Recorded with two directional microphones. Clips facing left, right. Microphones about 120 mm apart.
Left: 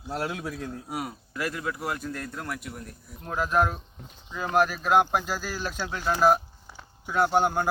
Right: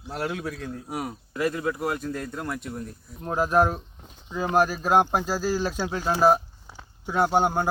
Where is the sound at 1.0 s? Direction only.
25° right (ahead or behind).